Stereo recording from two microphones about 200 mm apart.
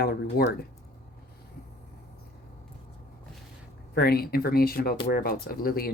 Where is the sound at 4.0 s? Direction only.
50° left (ahead or behind).